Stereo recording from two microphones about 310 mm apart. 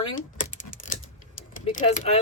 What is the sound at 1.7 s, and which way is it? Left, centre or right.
Speech, left.